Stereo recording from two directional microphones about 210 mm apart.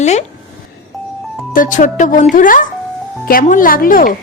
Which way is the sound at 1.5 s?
40° left (ahead or behind).